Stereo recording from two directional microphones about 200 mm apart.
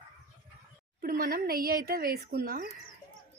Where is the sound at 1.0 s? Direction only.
45° right (ahead or behind).